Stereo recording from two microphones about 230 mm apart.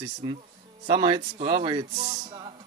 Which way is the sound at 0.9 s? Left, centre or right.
Right.